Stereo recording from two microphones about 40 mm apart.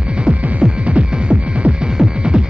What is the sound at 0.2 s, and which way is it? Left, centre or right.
Music, right.